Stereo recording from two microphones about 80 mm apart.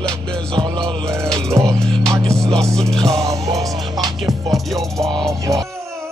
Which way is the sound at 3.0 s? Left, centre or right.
Right.